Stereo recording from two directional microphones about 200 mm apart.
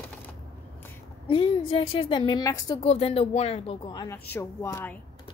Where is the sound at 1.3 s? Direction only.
25° left (ahead or behind).